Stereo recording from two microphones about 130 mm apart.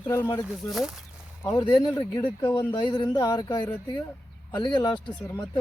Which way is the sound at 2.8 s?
35° left (ahead or behind).